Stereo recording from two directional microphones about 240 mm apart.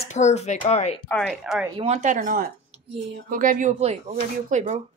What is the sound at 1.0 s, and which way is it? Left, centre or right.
Speech, centre.